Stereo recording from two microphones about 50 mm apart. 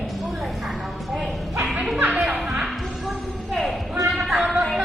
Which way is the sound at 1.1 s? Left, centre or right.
Centre.